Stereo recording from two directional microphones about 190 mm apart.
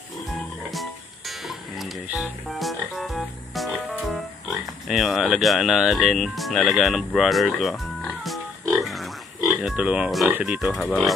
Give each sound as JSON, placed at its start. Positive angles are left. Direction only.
{"t": 0.7, "sound": "music", "side_deg": 0}
{"t": 9.6, "sound": "speech", "side_deg": -5}